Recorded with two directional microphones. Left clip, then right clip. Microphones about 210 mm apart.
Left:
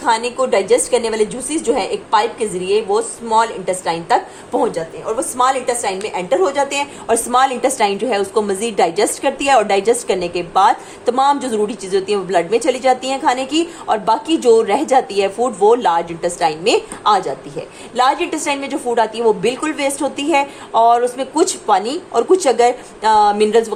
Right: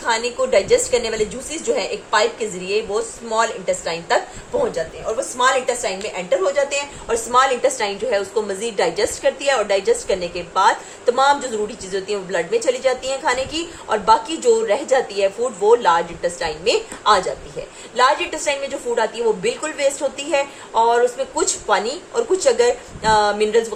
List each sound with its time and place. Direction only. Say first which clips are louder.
0.0 s a woman's voice: left 4 dB; 40° left (ahead or behind)
5.4 s a woman's voice: left 2 dB; 50° left (ahead or behind)